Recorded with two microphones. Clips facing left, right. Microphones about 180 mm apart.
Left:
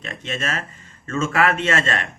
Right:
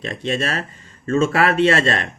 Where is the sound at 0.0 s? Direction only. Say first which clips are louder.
Right 6 dB; 35° right (ahead or behind).